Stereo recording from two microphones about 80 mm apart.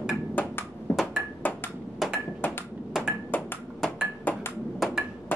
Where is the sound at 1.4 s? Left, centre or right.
Left.